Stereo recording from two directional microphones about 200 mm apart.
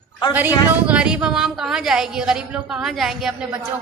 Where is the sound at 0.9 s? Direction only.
5° right (ahead or behind).